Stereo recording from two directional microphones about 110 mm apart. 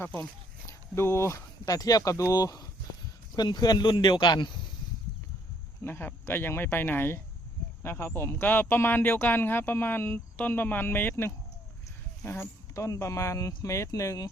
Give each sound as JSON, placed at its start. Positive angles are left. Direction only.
{"t": 0.7, "sound": "speech", "side_deg": 25}
{"t": 5.8, "sound": "speech", "side_deg": 20}